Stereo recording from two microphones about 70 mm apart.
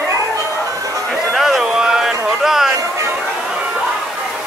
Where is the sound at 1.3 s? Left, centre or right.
Centre.